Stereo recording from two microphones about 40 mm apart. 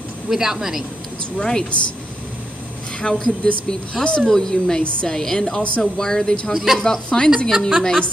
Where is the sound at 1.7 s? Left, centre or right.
Left.